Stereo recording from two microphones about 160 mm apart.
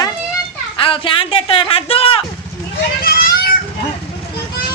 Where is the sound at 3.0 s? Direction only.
75° left (ahead or behind).